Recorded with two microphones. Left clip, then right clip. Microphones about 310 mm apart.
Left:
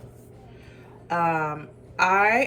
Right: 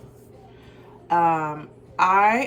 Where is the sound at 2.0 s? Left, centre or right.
Right.